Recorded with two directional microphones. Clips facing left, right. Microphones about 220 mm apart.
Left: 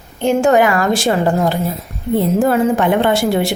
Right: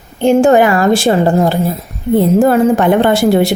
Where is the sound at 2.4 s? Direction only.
40° right (ahead or behind).